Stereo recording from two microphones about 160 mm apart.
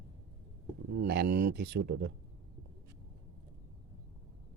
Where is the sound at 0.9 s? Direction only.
90° right.